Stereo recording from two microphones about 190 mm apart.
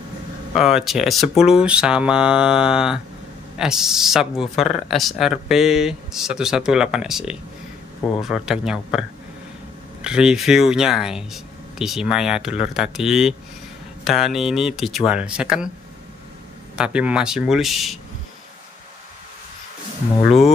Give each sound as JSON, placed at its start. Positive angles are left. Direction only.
{"t": 0.6, "sound": "speech", "side_deg": 0}
{"t": 10.0, "sound": "speech", "side_deg": -5}
{"t": 16.7, "sound": "speech", "side_deg": -5}